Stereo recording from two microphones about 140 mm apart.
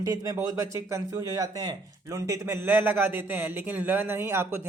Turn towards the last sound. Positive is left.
turn(degrees=-15)  # may be behind; listen again after turning